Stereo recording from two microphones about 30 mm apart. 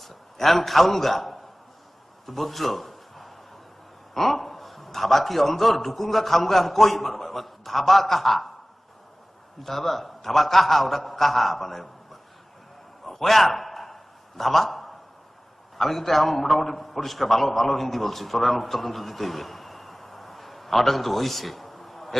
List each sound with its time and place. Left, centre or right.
0.0 s a man's voice: centre
2.2 s a sound: centre
4.1 s a man's voice: centre
9.6 s a man's voice: centre
13.1 s a sound: centre
15.8 s a man's voice: centre